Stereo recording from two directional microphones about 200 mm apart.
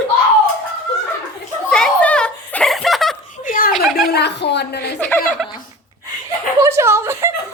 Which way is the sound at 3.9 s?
55° left (ahead or behind).